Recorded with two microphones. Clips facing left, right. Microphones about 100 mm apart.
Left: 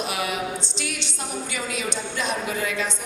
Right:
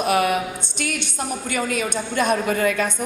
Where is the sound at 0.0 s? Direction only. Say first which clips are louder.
Right 8 dB; 55° right (ahead or behind).